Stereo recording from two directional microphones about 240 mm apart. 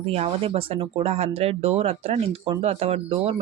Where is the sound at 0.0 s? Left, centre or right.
Right.